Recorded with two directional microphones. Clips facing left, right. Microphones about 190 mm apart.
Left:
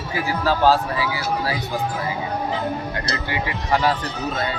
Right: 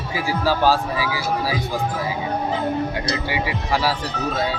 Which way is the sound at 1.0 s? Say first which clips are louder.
Even; 90° right.